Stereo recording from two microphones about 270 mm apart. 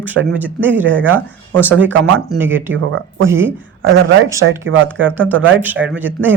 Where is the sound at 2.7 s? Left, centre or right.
Right.